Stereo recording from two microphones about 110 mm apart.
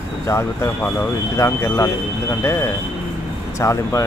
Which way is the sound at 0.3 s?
25° left (ahead or behind).